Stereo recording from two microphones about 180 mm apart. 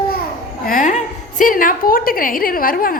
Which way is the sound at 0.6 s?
45° left (ahead or behind).